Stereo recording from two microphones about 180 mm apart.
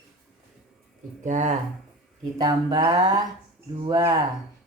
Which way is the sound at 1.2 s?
40° right (ahead or behind).